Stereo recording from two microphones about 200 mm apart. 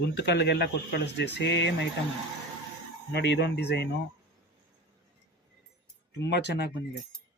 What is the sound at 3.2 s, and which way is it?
Speech, 60° left (ahead or behind).